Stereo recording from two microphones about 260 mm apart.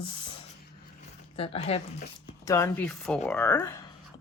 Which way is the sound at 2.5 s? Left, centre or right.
Centre.